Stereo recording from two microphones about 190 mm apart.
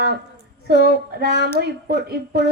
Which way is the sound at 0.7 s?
60° right (ahead or behind).